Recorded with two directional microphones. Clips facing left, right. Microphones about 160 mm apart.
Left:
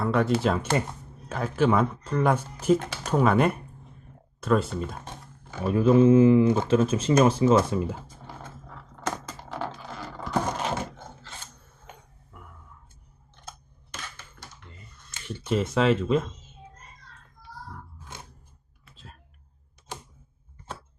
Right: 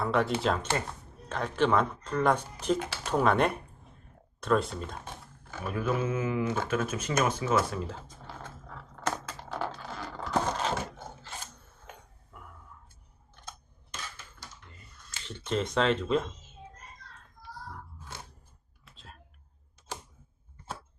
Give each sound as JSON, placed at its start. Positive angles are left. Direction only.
{"t": 0.0, "sound": "speech", "side_deg": 0}
{"t": 2.7, "sound": "speech", "side_deg": -10}
{"t": 3.1, "sound": "speech", "side_deg": 0}
{"t": 5.5, "sound": "a sound", "side_deg": 20}
{"t": 5.7, "sound": "speech", "side_deg": 30}
{"t": 9.0, "sound": "a sound", "side_deg": 10}
{"t": 12.3, "sound": "whispering", "side_deg": 0}
{"t": 15.3, "sound": "speech", "side_deg": 5}
{"t": 18.9, "sound": "a sound", "side_deg": 0}